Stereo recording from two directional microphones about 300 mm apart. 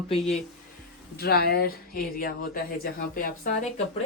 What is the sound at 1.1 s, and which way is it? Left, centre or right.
Speech, left.